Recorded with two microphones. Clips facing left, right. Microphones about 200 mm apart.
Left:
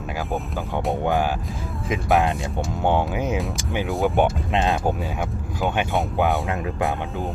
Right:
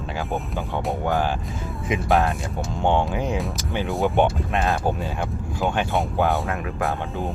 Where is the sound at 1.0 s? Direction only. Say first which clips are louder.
Left 1 dB; 15° left (ahead or behind).